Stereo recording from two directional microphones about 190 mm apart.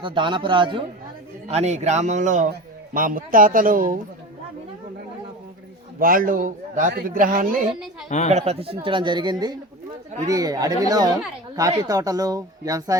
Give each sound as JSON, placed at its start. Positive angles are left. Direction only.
{"t": 0.0, "sound": "a man's voice", "side_deg": -25}
{"t": 6.0, "sound": "a man's voice", "side_deg": -45}
{"t": 8.3, "sound": "a man's voice", "side_deg": -35}